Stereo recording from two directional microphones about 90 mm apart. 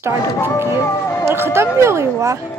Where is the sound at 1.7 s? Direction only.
30° right (ahead or behind).